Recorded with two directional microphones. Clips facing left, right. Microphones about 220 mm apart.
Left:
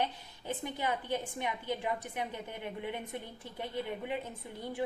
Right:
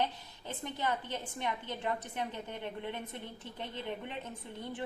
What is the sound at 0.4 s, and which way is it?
A woman's voice, 10° left (ahead or behind).